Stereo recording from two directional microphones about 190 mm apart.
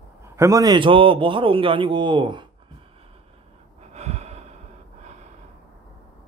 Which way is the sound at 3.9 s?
35° right (ahead or behind).